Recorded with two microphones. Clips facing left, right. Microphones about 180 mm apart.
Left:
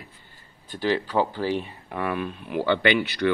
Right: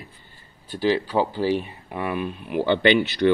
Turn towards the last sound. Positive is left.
turn(degrees=-25)  # may be behind; listen again after turning